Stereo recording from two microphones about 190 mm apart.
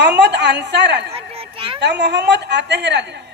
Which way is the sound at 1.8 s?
65° right (ahead or behind).